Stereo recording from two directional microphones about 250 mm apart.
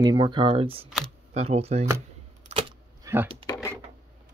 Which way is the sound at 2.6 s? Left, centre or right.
Centre.